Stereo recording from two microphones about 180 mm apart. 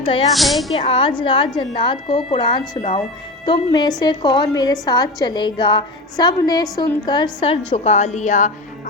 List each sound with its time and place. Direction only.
0.3 s speech: centre (ahead or behind)
0.8 s a woman's voice: 30° left (ahead or behind)
7.7 s a woman's voice: 40° left (ahead or behind)